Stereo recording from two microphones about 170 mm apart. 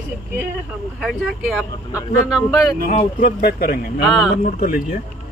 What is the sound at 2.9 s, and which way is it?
Speech, 65° left (ahead or behind).